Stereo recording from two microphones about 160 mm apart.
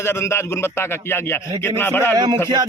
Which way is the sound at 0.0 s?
15° left (ahead or behind).